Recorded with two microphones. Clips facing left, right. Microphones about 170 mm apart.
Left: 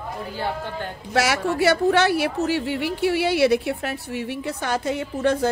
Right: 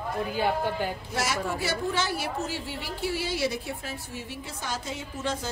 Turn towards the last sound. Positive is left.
turn(degrees=60)  # may be behind; listen again after turning